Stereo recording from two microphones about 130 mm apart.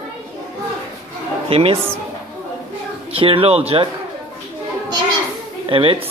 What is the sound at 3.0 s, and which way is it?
Speech, 45° right (ahead or behind).